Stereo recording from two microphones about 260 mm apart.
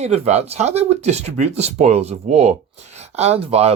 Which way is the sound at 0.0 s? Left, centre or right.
Right.